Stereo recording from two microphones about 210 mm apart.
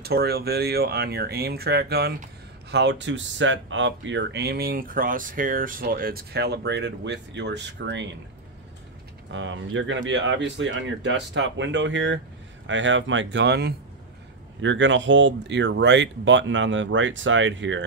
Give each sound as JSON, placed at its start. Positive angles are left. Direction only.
{"t": 0.0, "sound": "speech", "side_deg": -50}
{"t": 9.3, "sound": "speech", "side_deg": -65}